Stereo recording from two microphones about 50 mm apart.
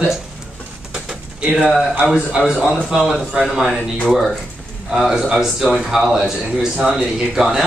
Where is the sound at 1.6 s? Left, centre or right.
Centre.